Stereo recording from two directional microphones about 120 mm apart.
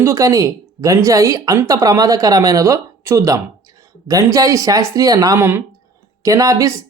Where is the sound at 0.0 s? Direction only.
25° right (ahead or behind).